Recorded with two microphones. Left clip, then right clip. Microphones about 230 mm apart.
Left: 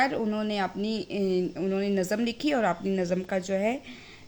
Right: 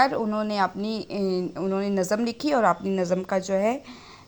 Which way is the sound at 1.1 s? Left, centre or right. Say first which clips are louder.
Right 1 dB; centre.